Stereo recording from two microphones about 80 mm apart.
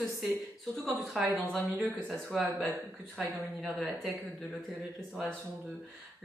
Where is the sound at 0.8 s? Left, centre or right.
Centre.